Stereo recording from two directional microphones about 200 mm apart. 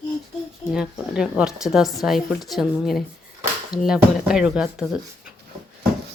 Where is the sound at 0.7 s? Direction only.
5° right (ahead or behind).